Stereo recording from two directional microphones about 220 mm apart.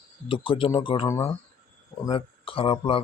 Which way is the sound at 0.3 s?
25° left (ahead or behind).